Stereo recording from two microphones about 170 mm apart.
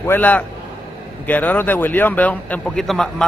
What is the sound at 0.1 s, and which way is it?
A man's voice, 10° left (ahead or behind).